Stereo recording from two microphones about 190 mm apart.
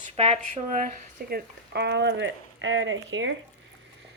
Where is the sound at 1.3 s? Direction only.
65° right (ahead or behind); by 3.4 s 85° right.